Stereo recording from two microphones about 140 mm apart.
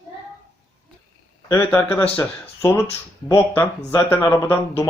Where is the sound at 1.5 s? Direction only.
15° left (ahead or behind).